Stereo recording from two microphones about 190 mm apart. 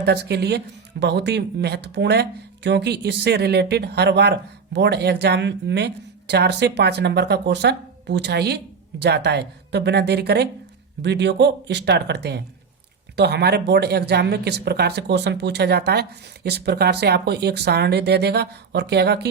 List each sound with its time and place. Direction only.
0.0 s speech: 60° right (ahead or behind)